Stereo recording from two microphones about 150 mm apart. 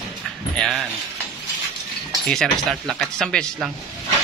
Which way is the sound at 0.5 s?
Centre (ahead or behind).